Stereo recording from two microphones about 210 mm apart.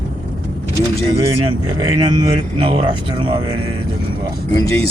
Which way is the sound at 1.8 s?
20° right (ahead or behind).